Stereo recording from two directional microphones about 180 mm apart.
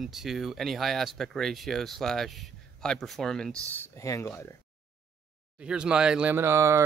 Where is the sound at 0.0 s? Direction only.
Centre (ahead or behind); by 4.6 s 15° left (ahead or behind).